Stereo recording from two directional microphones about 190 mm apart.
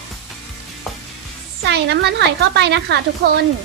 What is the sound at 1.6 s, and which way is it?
A child's voice, 60° right (ahead or behind).